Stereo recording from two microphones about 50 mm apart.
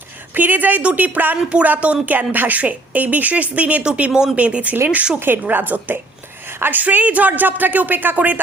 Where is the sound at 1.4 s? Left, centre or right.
Right.